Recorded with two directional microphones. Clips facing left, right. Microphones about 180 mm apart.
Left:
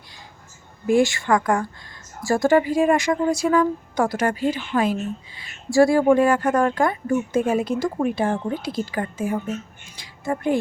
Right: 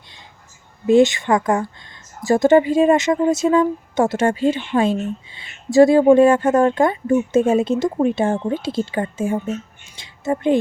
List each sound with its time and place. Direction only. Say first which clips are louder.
0.9 s speech: right 4 dB; 20° right (ahead or behind)